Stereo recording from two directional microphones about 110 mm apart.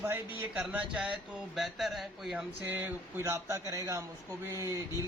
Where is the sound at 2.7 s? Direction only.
20° right (ahead or behind).